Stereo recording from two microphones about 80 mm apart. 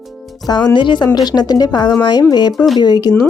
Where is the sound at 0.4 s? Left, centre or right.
Left.